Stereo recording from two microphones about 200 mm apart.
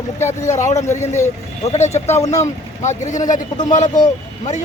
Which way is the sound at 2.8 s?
35° left (ahead or behind).